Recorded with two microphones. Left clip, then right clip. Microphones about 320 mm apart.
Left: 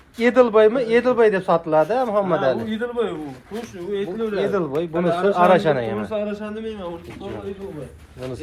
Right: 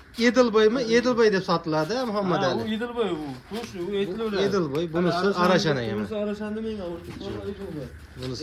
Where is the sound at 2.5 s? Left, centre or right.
Right.